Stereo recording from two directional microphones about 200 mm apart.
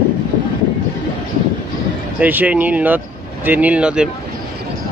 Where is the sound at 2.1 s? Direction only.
10° right (ahead or behind).